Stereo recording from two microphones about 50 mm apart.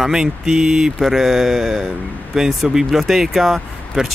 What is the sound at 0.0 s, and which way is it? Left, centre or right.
Speech, centre.